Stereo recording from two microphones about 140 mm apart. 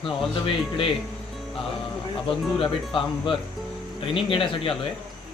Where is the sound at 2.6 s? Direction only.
40° left (ahead or behind).